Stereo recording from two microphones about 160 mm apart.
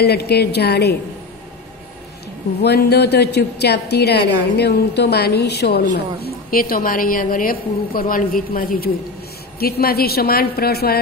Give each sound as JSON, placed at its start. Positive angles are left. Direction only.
{"t": 0.0, "sound": "a woman's voice", "side_deg": 90}
{"t": 2.6, "sound": "a woman's voice", "side_deg": 90}